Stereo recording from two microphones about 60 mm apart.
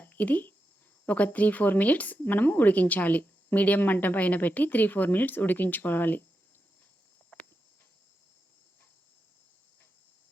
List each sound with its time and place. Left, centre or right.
0.0 s a sound: left
1.0 s speech: left
7.3 s cricket: left